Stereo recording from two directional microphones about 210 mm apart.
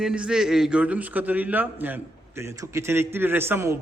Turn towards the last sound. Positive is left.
turn(degrees=-10)  # may be behind; listen again after turning